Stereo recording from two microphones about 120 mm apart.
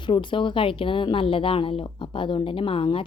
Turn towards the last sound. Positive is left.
turn(degrees=50)  # may be behind; listen again after turning